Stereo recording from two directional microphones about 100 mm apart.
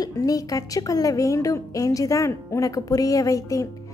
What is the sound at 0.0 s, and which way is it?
Speech, 35° left (ahead or behind).